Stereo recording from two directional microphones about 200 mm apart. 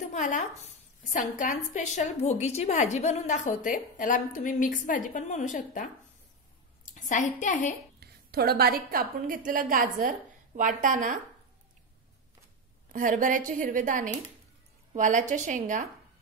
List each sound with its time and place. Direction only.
0.0 s a woman's voice: 35° left (ahead or behind)
6.9 s a woman's voice: 40° left (ahead or behind)
8.0 s a woman's voice: 50° right (ahead or behind)
12.9 s a woman's voice: 40° right (ahead or behind)